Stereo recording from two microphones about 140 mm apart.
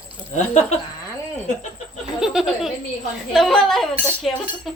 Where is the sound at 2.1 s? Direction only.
5° right (ahead or behind).